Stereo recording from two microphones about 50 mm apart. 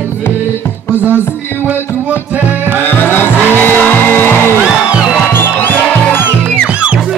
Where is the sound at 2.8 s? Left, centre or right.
Left.